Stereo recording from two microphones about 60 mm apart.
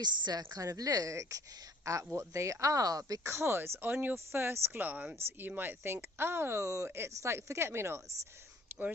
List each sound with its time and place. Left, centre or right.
0.3 s speech: right
3.2 s speech: right
8.7 s a sound: right